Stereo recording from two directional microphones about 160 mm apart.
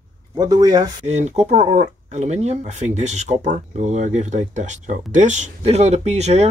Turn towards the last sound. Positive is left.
turn(degrees=-45)  # may be behind; listen again after turning